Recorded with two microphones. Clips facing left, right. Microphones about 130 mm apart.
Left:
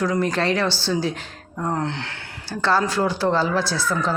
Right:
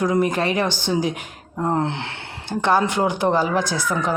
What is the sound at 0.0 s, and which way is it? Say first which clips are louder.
Speech: right 2 dB; 15° right (ahead or behind).